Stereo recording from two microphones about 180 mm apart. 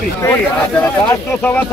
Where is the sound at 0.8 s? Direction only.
10° left (ahead or behind).